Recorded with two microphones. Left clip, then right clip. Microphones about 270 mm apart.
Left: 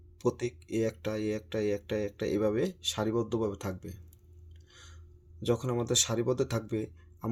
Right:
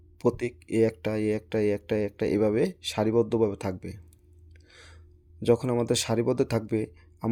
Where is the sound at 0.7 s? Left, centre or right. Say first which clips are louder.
Right 8 dB; right.